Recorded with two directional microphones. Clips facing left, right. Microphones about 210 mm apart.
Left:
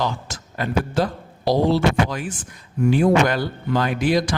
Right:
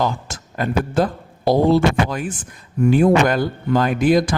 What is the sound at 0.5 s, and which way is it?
Speech, 50° right (ahead or behind).